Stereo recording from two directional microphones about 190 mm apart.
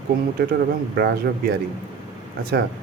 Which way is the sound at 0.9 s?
55° right (ahead or behind).